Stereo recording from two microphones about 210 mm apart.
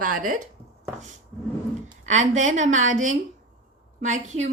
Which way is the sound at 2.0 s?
35° right (ahead or behind).